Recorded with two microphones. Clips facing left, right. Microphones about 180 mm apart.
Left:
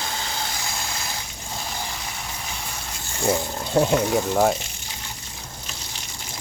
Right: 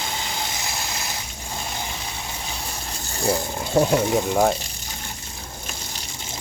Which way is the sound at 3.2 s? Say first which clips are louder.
Even; 5° right (ahead or behind).